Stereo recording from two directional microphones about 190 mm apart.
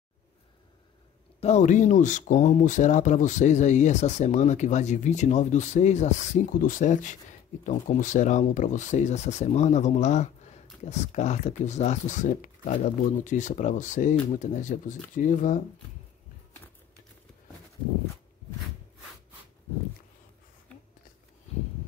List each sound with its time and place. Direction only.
1.4 s speech: 40° left (ahead or behind)